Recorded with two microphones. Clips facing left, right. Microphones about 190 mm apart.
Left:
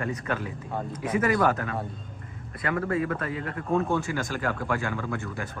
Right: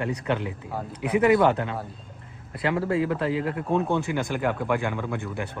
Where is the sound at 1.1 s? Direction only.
20° right (ahead or behind).